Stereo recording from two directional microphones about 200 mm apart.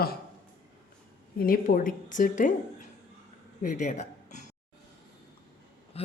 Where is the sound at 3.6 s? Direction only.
40° left (ahead or behind).